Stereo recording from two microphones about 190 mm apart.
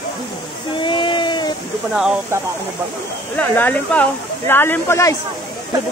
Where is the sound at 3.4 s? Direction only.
10° left (ahead or behind).